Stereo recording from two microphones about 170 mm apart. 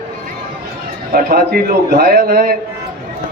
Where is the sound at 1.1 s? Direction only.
60° right (ahead or behind).